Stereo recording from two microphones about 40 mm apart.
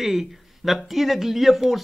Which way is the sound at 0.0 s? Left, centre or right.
Centre.